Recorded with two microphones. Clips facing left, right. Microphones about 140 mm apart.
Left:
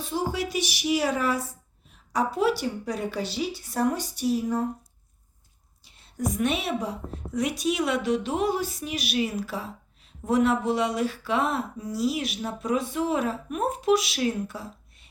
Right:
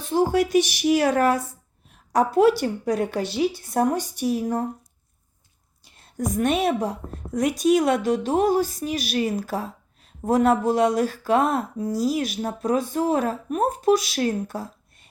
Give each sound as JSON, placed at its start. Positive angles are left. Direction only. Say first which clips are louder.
{"t": 0.0, "sound": "speech", "louder": "right 8 dB", "side_deg": -50}
{"t": 5.8, "sound": "a woman's voice", "louder": "right 2 dB", "side_deg": -45}